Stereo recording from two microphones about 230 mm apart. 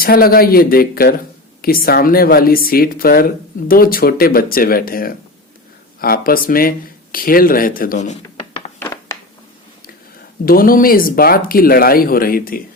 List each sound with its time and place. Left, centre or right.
0.0 s speech: left
8.8 s a sound: centre
10.4 s speech: left